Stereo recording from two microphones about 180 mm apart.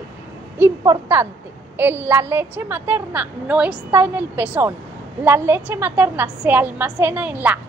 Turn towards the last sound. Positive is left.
turn(degrees=-10)  # may be behind; listen again after turning